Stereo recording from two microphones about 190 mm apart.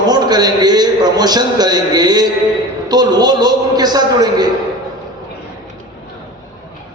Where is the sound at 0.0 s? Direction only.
20° right (ahead or behind).